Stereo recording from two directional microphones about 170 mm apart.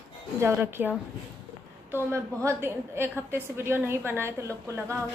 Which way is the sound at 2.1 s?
15° right (ahead or behind).